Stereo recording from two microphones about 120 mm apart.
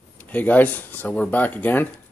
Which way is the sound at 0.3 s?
15° left (ahead or behind).